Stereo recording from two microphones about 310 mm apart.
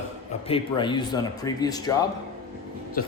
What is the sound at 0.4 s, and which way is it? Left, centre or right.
Speech, centre.